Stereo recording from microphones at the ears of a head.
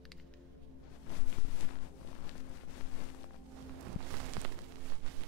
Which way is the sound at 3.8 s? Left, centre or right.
Right.